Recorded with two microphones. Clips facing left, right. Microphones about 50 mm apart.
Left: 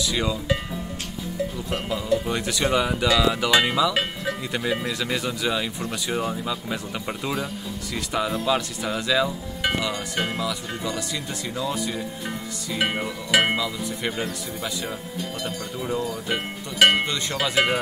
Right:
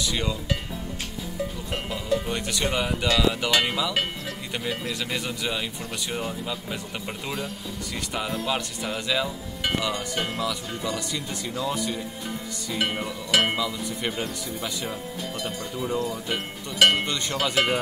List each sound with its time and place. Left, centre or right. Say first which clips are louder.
0.0 s speech: left 3 dB; centre
2.2 s speech: left 3 dB; centre
6.0 s music: left 4 dB; centre
6.4 s speech: left 3 dB; centre
9.6 s music: left 1 dB; centre
11.4 s speech: even; centre
12.7 s music: left 2 dB; centre
13.6 s speech: left 1 dB; centre
15.4 s music: right 1 dB; centre
16.3 s speech: left 2 dB; centre
17.0 s music: left 1 dB; centre